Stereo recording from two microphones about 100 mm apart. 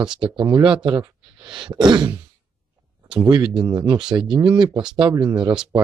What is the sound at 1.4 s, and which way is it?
Throat clearing, 55° right (ahead or behind).